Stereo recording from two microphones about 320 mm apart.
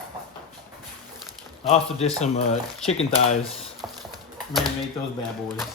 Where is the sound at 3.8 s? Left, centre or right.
Centre.